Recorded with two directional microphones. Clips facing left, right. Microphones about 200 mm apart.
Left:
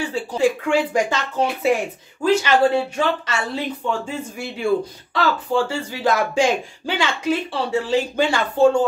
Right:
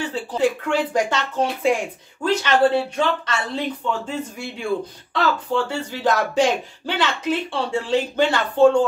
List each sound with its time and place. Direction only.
0.0 s speech: 10° left (ahead or behind)
5.1 s speech: 10° left (ahead or behind)